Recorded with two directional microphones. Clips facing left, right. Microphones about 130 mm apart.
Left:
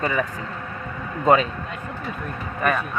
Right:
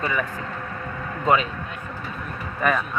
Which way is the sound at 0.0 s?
35° left (ahead or behind).